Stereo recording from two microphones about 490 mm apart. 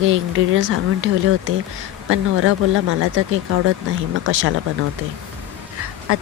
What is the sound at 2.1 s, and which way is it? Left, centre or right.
Speech, right.